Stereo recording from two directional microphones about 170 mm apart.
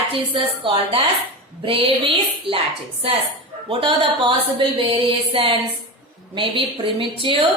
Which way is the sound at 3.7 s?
30° right (ahead or behind).